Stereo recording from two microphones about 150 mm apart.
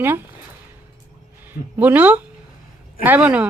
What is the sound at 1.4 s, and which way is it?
Speech, 10° right (ahead or behind).